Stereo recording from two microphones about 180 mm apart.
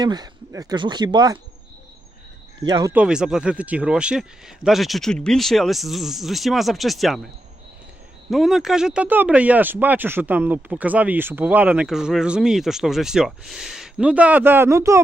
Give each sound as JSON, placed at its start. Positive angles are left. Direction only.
{"t": 0.0, "sound": "speech", "side_deg": -20}
{"t": 2.6, "sound": "speech", "side_deg": -20}
{"t": 2.9, "sound": "speech", "side_deg": -5}
{"t": 8.3, "sound": "speech", "side_deg": 0}